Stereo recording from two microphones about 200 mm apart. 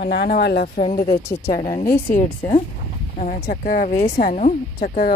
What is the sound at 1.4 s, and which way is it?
Speech, 20° left (ahead or behind).